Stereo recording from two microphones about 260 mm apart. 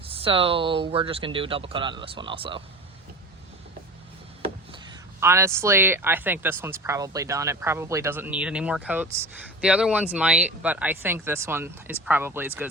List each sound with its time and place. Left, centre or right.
0.0 s speech: right
5.2 s speech: centre